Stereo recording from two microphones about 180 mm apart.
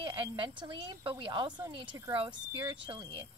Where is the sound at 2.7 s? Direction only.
25° right (ahead or behind).